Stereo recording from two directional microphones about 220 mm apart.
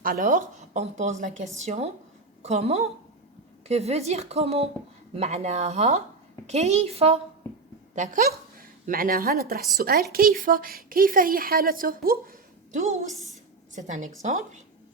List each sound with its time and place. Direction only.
0.0 s a woman's voice: 40° right (ahead or behind)